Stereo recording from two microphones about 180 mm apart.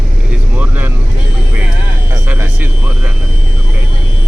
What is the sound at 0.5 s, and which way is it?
Vehicle, 10° right (ahead or behind).